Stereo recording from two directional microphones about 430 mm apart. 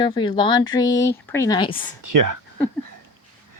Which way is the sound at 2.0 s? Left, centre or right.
Right.